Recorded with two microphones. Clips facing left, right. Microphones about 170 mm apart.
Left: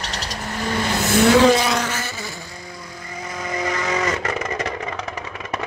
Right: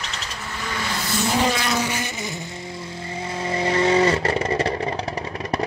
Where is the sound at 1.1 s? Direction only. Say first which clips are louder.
Left 8 dB; 80° left.